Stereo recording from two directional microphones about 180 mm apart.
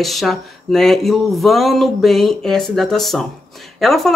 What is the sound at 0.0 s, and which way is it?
Speech, centre (ahead or behind).